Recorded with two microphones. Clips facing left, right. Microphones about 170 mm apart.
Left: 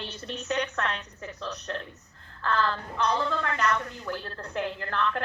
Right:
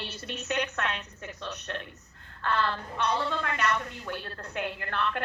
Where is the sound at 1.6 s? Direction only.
35° left (ahead or behind).